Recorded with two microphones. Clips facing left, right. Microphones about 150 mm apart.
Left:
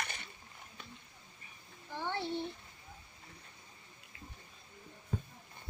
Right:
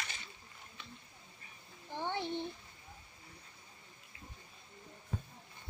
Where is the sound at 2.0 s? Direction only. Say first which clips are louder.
Even; 15° right (ahead or behind).